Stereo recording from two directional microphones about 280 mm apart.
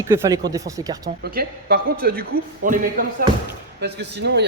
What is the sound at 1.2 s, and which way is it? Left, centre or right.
A man's voice, right.